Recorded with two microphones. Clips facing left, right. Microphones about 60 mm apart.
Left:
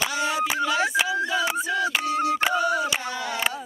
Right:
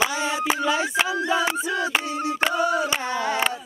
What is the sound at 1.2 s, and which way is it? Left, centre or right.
Music, right.